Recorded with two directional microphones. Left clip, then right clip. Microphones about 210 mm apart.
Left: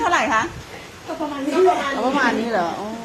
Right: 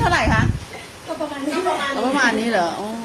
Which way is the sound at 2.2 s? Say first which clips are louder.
Right 3 dB; 30° right (ahead or behind).